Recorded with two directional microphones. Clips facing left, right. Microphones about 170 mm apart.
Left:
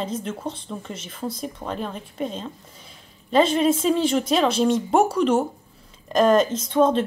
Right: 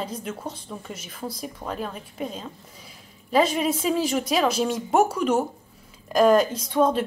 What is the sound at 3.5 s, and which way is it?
A woman's voice, 10° right (ahead or behind).